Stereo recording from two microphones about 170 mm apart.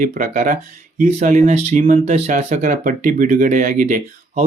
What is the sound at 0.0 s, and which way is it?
Speech, 50° right (ahead or behind).